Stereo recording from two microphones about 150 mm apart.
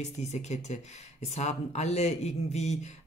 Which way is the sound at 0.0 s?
50° left (ahead or behind).